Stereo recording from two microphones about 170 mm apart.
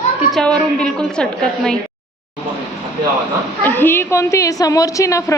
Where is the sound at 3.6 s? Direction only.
10° left (ahead or behind).